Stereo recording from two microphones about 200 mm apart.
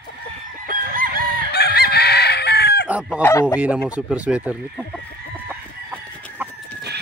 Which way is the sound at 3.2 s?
10° left (ahead or behind).